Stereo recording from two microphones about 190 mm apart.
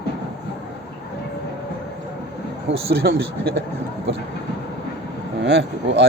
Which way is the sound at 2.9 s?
55° right (ahead or behind).